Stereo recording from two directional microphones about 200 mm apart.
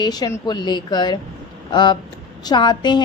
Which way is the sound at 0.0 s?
20° left (ahead or behind).